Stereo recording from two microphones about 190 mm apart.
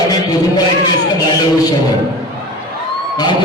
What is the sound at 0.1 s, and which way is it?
Music, 20° left (ahead or behind).